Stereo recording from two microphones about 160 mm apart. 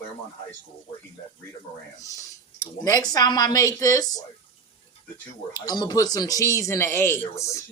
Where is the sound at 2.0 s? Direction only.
20° left (ahead or behind).